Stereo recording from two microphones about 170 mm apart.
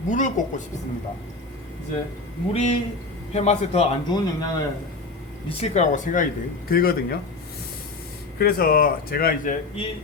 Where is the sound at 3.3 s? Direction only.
40° left (ahead or behind).